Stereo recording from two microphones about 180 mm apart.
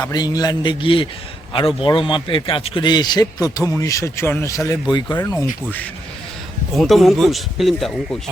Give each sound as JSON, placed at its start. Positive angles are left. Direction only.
{"t": 0.0, "sound": "a man's voice", "side_deg": 20}
{"t": 6.7, "sound": "speech", "side_deg": 0}